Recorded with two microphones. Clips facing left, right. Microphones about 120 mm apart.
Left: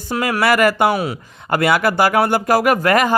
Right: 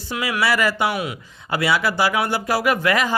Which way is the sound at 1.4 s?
50° left (ahead or behind).